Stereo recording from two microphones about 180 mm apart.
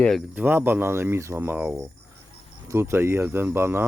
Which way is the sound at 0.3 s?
10° right (ahead or behind).